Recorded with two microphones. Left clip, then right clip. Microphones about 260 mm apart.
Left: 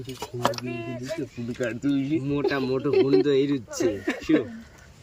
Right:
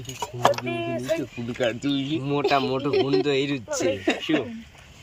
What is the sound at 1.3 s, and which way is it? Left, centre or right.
Speech, centre.